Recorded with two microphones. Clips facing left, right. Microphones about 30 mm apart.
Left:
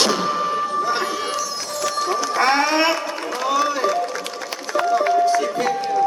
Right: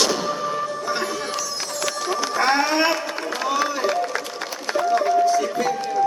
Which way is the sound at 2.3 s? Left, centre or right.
Left.